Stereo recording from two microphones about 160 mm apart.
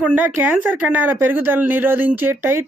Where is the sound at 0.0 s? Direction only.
10° right (ahead or behind).